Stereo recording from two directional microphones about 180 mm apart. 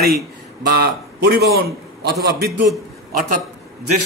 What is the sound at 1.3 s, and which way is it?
Speech, 65° right (ahead or behind).